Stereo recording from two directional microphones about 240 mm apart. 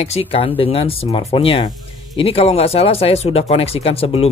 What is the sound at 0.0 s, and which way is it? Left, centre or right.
Speech, left.